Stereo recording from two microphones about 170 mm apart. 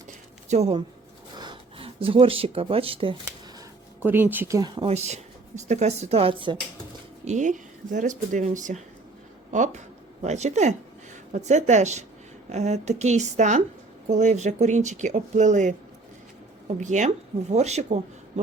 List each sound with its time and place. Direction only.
0.4 s speech: 40° right (ahead or behind)
1.4 s speech: 30° right (ahead or behind)
4.0 s speech: 10° right (ahead or behind)
4.9 s speech: 40° right (ahead or behind)
7.3 s speech: 45° right (ahead or behind)